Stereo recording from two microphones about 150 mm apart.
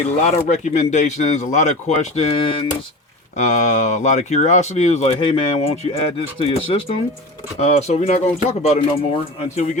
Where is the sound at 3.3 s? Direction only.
50° left (ahead or behind).